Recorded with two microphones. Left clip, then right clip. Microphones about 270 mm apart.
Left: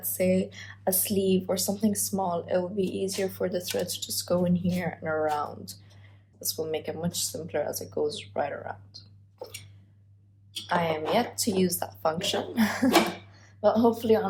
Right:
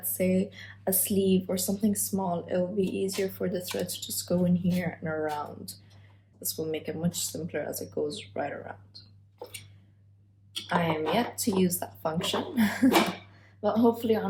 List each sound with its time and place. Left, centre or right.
0.0 s speech: centre
10.7 s speech: centre